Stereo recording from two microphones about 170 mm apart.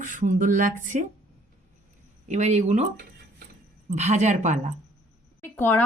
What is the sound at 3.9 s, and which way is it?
Speech, 40° right (ahead or behind).